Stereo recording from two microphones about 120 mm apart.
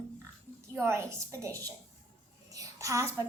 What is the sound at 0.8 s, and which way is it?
A woman's voice, 25° right (ahead or behind).